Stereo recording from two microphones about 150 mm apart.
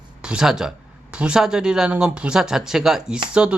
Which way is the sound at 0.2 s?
5° right (ahead or behind).